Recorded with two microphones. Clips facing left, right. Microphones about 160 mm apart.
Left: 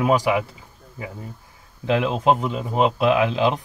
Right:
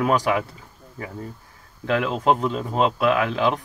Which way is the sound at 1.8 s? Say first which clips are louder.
Left 1 dB; 20° left (ahead or behind).